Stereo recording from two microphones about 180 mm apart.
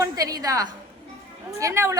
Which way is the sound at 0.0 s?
20° right (ahead or behind).